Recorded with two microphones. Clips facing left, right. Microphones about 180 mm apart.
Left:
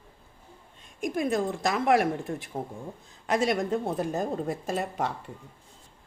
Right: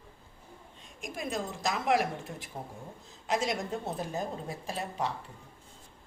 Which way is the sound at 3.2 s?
55° left (ahead or behind).